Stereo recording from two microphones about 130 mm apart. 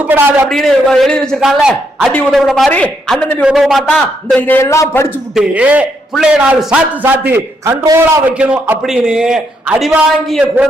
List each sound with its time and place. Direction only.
0.1 s a man's voice: 15° right (ahead or behind)
0.4 s a man's voice: 5° left (ahead or behind)
2.6 s a man's voice: 10° left (ahead or behind)
3.4 s a man's voice: centre (ahead or behind); by 5.1 s 20° left (ahead or behind)
5.3 s a man's voice: 10° right (ahead or behind)
10.4 s a man's voice: 15° right (ahead or behind)